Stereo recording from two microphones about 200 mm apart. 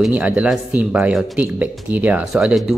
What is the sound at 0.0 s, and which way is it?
Speech, 5° right (ahead or behind).